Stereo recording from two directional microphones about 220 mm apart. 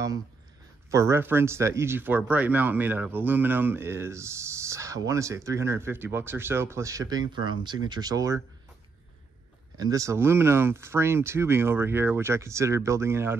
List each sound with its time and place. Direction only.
0.8 s speech: 15° right (ahead or behind)
9.8 s speech: 15° right (ahead or behind)